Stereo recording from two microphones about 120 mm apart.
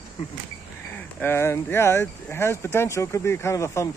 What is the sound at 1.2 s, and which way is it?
Speech, 20° left (ahead or behind).